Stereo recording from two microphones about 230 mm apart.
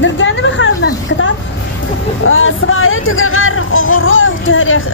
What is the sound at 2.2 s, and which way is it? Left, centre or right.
Speech, left.